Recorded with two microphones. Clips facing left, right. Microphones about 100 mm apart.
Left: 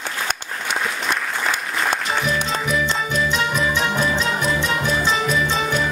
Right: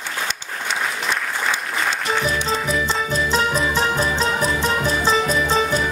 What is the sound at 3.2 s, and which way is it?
Music, 35° right (ahead or behind).